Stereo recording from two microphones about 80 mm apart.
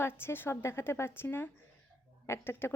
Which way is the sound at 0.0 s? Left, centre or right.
Left.